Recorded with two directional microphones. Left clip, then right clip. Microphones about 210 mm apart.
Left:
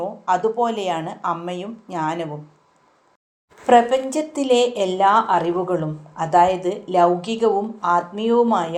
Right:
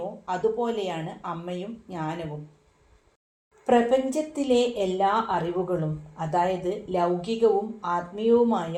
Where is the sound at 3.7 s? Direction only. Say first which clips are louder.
Left 6 dB; 20° left (ahead or behind).